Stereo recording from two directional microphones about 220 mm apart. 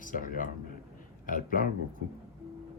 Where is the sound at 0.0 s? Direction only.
40° left (ahead or behind).